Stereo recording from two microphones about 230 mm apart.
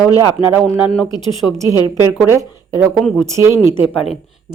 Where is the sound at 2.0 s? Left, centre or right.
Centre.